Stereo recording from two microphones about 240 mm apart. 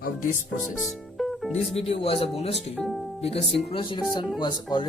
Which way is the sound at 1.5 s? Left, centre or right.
Left.